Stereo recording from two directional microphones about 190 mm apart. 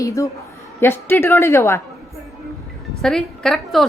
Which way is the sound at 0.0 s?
15° left (ahead or behind).